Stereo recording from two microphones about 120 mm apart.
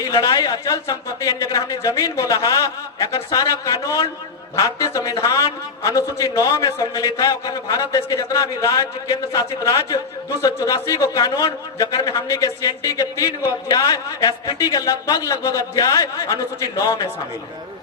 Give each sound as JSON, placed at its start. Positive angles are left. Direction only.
{"t": 0.0, "sound": "a man's voice", "side_deg": 30}